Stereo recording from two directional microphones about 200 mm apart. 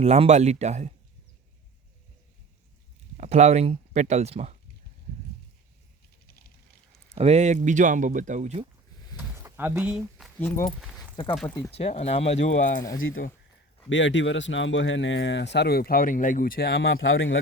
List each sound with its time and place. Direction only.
0.0 s speech: 35° right (ahead or behind)
3.2 s speech: 35° right (ahead or behind)
7.2 s speech: 35° right (ahead or behind)
9.1 s a sound: 10° right (ahead or behind)
10.4 s speech: 15° left (ahead or behind)
11.7 s speech: 30° left (ahead or behind)
12.4 s speech: 65° left (ahead or behind)
13.9 s speech: 65° left (ahead or behind); by 16.7 s 50° left (ahead or behind)
16.7 s speech: 75° left (ahead or behind)